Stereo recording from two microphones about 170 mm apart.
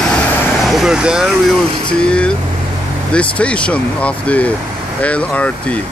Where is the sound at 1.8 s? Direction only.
5° left (ahead or behind).